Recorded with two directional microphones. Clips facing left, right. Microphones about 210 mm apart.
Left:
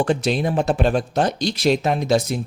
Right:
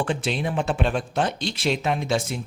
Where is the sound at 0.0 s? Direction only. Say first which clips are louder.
Left 6 dB; 40° left (ahead or behind).